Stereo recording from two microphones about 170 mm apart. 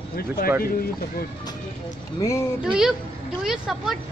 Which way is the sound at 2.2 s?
15° left (ahead or behind).